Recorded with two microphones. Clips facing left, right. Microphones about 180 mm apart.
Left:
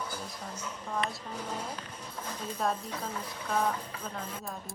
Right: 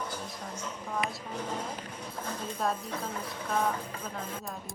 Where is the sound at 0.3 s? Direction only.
10° right (ahead or behind).